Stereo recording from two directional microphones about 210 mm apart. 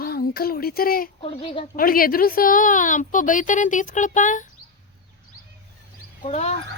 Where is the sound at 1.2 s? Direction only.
25° left (ahead or behind).